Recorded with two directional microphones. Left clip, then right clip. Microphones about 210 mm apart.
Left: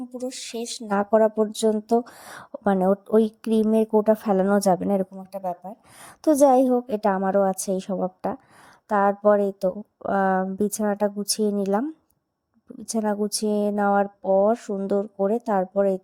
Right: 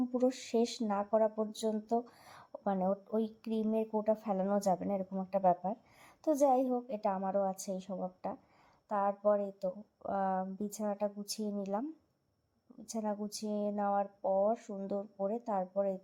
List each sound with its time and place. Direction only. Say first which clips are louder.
0.3 s speech: left 1 dB; 45° left (ahead or behind)
5.1 s a woman's voice: even; centre (ahead or behind)
6.0 s speech: left 13 dB; 45° left (ahead or behind)
12.9 s speech: left 13 dB; 45° left (ahead or behind)